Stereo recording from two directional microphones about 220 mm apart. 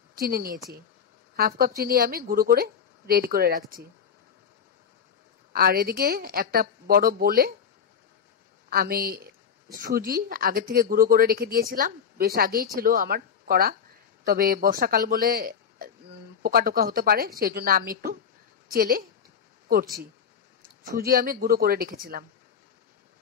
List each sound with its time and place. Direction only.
0.1 s a woman's voice: 45° right (ahead or behind)
5.5 s speech: 40° right (ahead or behind)
8.6 s speech: 40° right (ahead or behind)
21.0 s speech: 40° right (ahead or behind)